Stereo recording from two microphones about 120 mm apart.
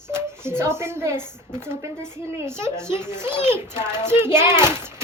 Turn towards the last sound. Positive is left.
turn(degrees=-20)  # may be behind; listen again after turning